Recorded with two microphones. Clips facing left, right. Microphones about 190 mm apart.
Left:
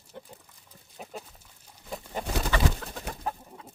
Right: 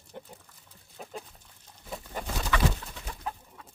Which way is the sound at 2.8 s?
60° left (ahead or behind).